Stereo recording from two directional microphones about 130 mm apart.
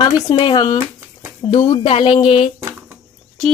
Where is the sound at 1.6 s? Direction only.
50° left (ahead or behind).